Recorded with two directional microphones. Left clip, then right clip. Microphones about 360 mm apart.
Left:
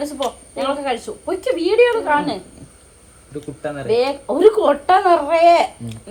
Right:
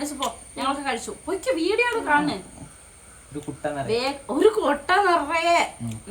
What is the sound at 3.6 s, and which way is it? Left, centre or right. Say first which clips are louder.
Speech: left 7 dB; centre.